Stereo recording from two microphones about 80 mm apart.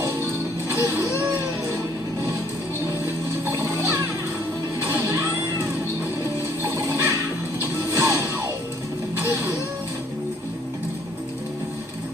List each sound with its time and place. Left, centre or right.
0.0 s music: right
3.4 s music: right
6.6 s music: right